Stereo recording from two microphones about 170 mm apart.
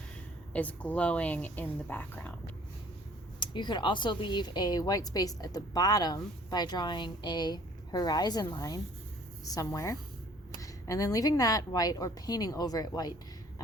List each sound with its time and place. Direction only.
0.5 s speech: 10° left (ahead or behind)
3.4 s speech: 25° left (ahead or behind)